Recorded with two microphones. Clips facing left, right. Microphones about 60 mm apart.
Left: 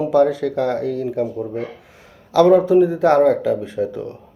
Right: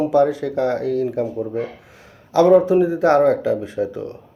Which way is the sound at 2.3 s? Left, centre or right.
Right.